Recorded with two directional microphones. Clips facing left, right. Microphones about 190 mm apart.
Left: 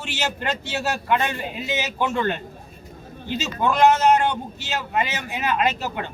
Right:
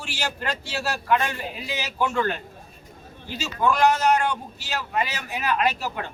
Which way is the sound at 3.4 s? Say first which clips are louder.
Left 2 dB; 20° left (ahead or behind).